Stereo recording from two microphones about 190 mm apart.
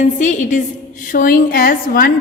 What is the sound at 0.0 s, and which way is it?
A woman's voice, 40° left (ahead or behind).